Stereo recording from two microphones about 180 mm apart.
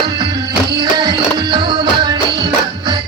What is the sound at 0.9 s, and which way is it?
Music, 20° right (ahead or behind).